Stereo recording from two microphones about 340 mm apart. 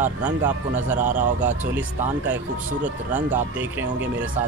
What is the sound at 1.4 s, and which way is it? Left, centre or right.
A man's voice, centre.